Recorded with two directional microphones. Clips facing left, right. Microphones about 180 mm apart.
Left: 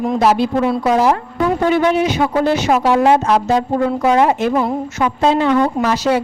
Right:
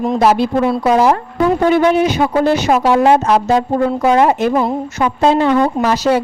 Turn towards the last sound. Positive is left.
turn(degrees=-40)  # may be behind; listen again after turning